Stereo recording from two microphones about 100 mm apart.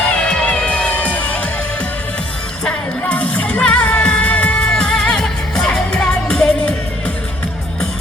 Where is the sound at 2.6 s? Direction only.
15° left (ahead or behind).